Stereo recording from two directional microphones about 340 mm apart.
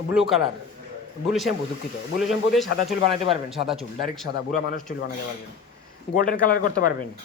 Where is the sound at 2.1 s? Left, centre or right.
Centre.